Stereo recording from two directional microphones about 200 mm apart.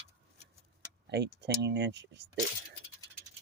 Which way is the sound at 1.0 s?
55° right (ahead or behind).